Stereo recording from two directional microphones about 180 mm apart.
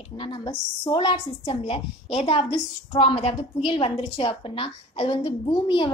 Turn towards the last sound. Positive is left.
turn(degrees=25)  # may be behind; listen again after turning